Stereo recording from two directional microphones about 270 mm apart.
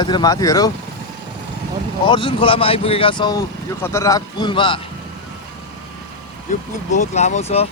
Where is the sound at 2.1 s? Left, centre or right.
Centre.